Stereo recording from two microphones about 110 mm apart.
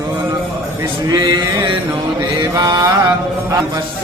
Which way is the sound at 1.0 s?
40° right (ahead or behind).